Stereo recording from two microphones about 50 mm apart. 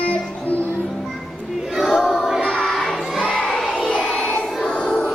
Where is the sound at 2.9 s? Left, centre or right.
Centre.